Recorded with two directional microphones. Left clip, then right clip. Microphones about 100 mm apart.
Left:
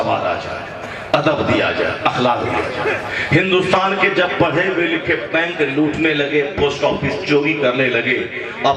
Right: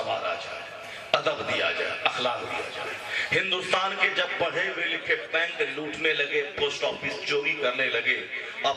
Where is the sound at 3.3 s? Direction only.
15° right (ahead or behind).